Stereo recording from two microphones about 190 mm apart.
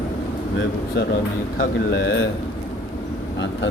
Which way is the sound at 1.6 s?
70° left (ahead or behind).